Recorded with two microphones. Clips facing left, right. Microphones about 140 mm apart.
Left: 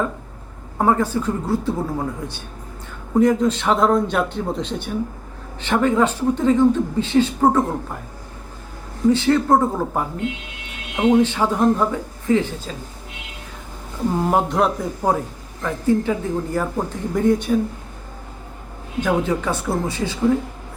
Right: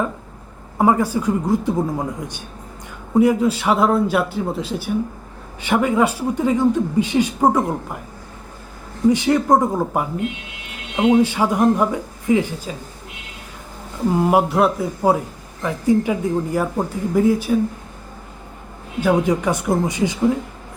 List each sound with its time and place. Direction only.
0.8 s speech: 10° right (ahead or behind)
9.0 s speech: 15° right (ahead or behind)
14.2 s a man's voice: 5° right (ahead or behind)
18.9 s speech: 10° right (ahead or behind)